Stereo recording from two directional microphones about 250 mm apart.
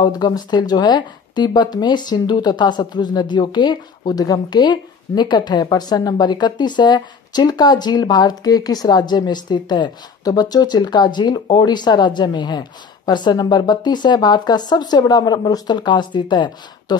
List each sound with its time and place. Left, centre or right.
0.0 s speech: centre